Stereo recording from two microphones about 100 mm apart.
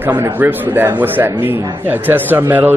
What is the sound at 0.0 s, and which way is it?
Speech, 20° right (ahead or behind).